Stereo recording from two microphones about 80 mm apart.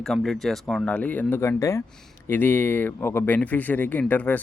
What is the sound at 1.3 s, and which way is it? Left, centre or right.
Speech, left.